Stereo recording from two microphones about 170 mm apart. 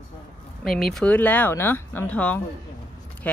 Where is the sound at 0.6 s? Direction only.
Centre (ahead or behind).